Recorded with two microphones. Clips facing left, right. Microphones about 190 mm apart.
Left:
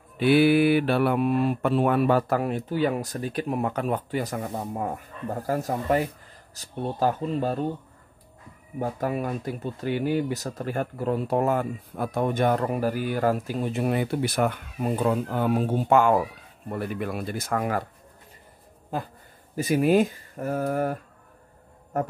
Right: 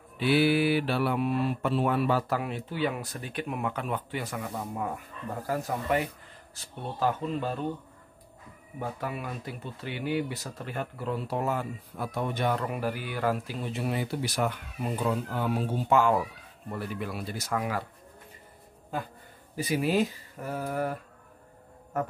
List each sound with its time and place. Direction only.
0.2 s speech: 55° left (ahead or behind); by 7.6 s 40° left (ahead or behind)
8.7 s speech: 40° left (ahead or behind)
19.5 s speech: 45° left (ahead or behind)